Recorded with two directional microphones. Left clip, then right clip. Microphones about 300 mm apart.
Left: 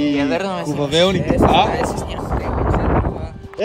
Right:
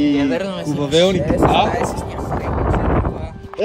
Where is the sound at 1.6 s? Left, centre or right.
Left.